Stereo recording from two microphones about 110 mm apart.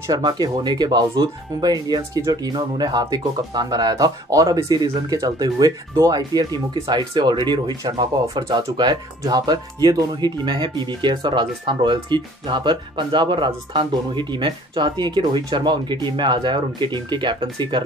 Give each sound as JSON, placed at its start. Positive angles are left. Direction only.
{"t": 0.0, "sound": "speech", "side_deg": -35}